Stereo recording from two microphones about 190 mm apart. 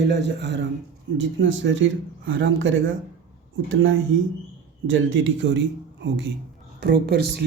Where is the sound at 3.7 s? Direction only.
90° right; by 6.3 s 70° right (ahead or behind).